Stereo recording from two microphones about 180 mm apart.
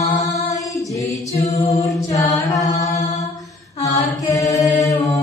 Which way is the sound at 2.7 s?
40° left (ahead or behind).